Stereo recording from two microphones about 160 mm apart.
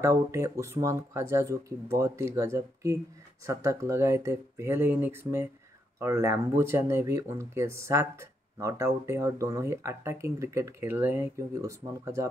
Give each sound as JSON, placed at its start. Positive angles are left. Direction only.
{"t": 0.0, "sound": "speech", "side_deg": -15}